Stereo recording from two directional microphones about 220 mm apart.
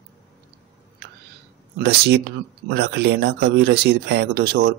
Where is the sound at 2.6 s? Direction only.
50° right (ahead or behind).